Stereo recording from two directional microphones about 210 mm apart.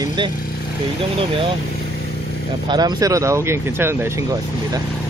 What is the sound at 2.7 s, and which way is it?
Speech, 20° right (ahead or behind).